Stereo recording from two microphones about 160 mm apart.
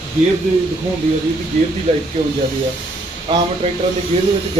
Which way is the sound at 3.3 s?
35° right (ahead or behind).